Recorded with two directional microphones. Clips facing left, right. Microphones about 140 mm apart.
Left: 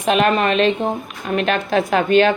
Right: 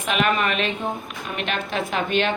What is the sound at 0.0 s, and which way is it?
A woman's voice, 35° left (ahead or behind).